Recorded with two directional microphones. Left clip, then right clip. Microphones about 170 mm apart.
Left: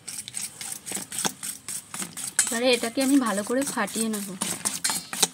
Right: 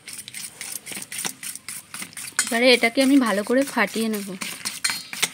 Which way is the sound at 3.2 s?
30° right (ahead or behind).